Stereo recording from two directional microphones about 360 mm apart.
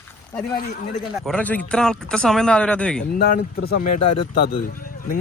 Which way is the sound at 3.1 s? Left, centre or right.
Left.